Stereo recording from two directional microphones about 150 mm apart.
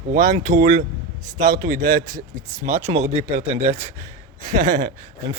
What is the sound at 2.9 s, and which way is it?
Speech, 45° right (ahead or behind).